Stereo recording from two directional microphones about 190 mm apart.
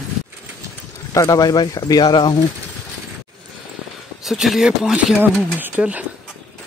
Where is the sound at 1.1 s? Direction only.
20° left (ahead or behind).